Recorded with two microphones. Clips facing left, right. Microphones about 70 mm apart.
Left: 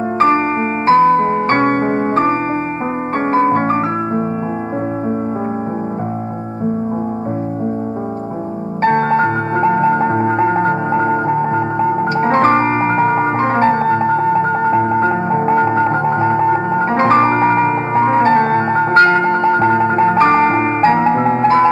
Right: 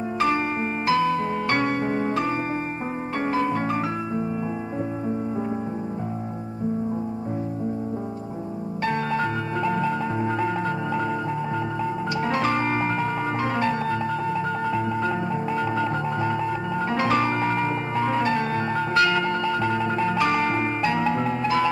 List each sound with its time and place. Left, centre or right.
0.8 s music: left
8.8 s music: left